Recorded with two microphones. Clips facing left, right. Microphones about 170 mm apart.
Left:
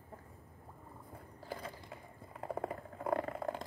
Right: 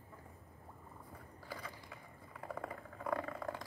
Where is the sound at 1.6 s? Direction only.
30° left (ahead or behind).